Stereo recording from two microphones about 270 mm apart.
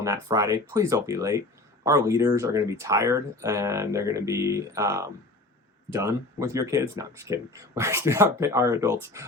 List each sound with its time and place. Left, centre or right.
0.0 s speech: centre